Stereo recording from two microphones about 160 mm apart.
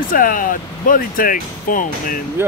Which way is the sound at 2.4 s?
15° right (ahead or behind).